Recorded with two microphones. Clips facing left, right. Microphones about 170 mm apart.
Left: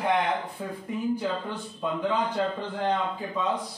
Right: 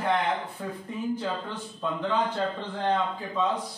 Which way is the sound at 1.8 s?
10° left (ahead or behind).